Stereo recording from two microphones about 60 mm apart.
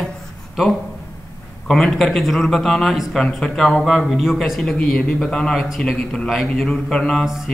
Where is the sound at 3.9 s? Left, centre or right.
Centre.